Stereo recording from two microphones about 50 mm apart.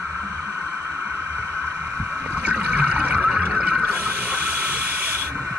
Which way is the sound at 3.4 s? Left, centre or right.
Right.